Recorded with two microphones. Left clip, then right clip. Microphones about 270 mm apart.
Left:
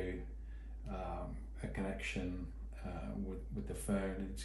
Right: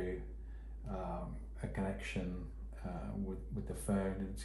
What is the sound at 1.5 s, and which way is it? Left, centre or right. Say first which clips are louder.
Speech: right 1 dB; centre.